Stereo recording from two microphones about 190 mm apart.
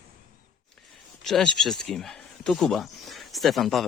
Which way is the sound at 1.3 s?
Centre (ahead or behind).